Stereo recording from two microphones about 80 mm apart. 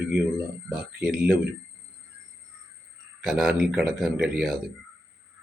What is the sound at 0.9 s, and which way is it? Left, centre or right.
Speech, centre.